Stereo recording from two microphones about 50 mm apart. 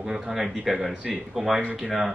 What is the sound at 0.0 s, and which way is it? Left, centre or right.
Speech, centre.